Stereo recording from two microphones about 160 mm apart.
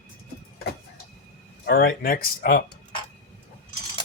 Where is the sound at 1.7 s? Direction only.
70° left (ahead or behind).